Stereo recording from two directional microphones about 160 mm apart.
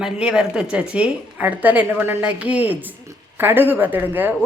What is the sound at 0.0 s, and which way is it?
A woman's voice, 5° right (ahead or behind).